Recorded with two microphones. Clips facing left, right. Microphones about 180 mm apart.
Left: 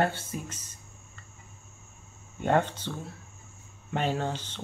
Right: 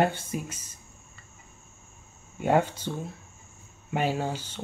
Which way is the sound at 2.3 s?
10° right (ahead or behind).